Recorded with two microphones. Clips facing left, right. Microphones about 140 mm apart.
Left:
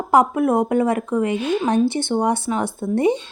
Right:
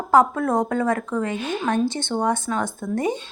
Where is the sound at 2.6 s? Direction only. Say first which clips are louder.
Left 5 dB; 30° left (ahead or behind).